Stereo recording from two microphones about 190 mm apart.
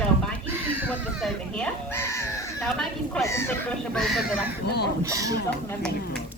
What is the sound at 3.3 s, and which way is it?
Speech, 15° left (ahead or behind).